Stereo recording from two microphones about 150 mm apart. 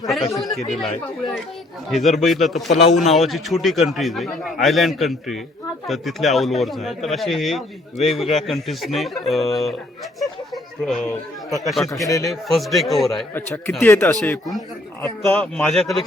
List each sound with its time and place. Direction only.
0.0 s a man's voice: centre (ahead or behind)
1.9 s a man's voice: centre (ahead or behind)
10.2 s a sound: centre (ahead or behind)
11.6 s a man's voice: centre (ahead or behind)
11.9 s a man's voice: 20° left (ahead or behind)
12.3 s a man's voice: centre (ahead or behind)
13.3 s a man's voice: 15° left (ahead or behind); by 16.0 s centre (ahead or behind)